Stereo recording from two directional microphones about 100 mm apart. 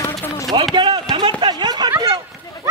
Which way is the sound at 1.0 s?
50° right (ahead or behind).